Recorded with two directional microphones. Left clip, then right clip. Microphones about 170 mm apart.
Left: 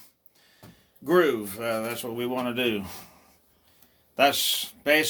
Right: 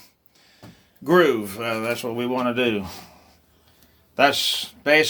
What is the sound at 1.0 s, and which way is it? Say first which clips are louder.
Speech: right 5 dB; 50° right (ahead or behind).